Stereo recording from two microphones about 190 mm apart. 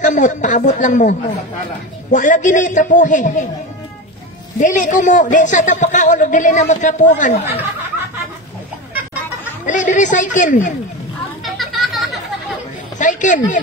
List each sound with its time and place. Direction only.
0.0 s a man's voice: 40° left (ahead or behind)
4.6 s a man's voice: 40° left (ahead or behind)
9.7 s a man's voice: 40° left (ahead or behind)
11.4 s children playing: centre (ahead or behind)
13.0 s a man's voice: 40° left (ahead or behind)